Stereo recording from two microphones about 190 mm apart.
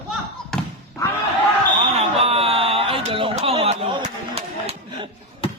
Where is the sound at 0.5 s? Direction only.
Centre (ahead or behind).